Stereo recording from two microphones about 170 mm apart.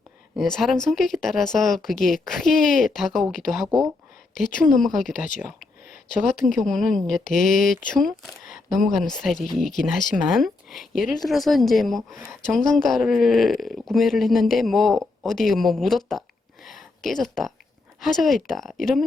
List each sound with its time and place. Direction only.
0.3 s speech: centre (ahead or behind)
6.6 s speech: centre (ahead or behind)
7.3 s speech: 55° left (ahead or behind)
7.9 s speech: centre (ahead or behind)
16.6 s a sound: centre (ahead or behind)
18.0 s speech: centre (ahead or behind)